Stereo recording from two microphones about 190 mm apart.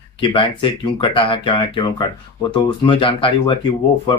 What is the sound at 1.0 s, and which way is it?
Speech, 25° left (ahead or behind).